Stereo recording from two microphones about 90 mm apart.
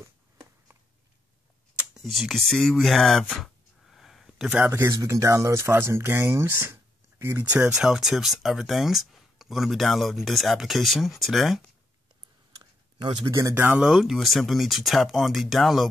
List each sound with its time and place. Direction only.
0.0 s a sound: 30° right (ahead or behind)
2.0 s speech: centre (ahead or behind)
3.3 s a sound: 5° left (ahead or behind)
4.6 s speech: 25° right (ahead or behind)
7.5 s speech: 10° right (ahead or behind)
13.6 s speech: 20° right (ahead or behind)
13.8 s speech: centre (ahead or behind)